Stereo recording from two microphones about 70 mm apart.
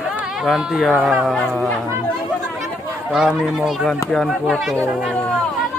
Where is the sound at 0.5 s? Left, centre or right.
Centre.